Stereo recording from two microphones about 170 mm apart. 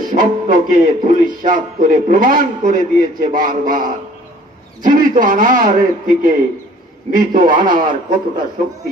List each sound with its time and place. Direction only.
0.0 s a man's voice: 50° right (ahead or behind)
7.8 s a man's voice: 25° right (ahead or behind)